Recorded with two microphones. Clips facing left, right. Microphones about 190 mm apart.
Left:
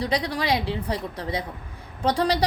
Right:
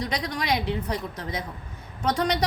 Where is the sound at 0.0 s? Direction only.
30° left (ahead or behind).